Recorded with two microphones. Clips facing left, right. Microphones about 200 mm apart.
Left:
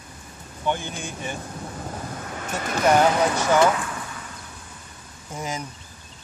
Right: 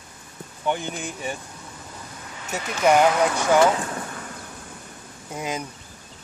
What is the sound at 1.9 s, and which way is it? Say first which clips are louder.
Vehicle: left 7 dB; 55° left (ahead or behind).